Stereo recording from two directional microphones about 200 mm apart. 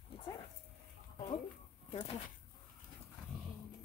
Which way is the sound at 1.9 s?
25° left (ahead or behind).